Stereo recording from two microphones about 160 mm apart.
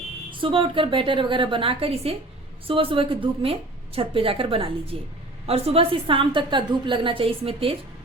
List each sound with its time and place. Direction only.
0.3 s a woman's voice: 30° right (ahead or behind)